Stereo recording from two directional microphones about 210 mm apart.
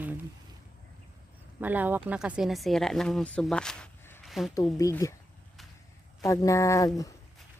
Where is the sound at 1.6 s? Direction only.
10° right (ahead or behind); by 4.2 s 5° left (ahead or behind).